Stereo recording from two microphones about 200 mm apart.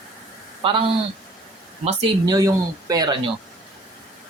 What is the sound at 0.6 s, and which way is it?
Speech, 25° right (ahead or behind).